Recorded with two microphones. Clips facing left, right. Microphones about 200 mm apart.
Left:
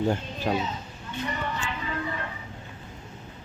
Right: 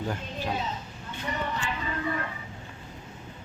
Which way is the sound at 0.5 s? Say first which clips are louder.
Left 6 dB; 50° left (ahead or behind).